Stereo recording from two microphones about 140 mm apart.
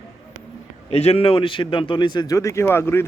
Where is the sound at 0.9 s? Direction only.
50° left (ahead or behind).